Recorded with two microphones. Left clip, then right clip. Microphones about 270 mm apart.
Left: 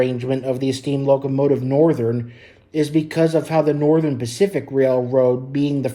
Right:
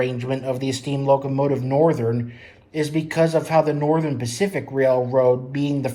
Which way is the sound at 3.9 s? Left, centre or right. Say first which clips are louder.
Left 4 dB; left.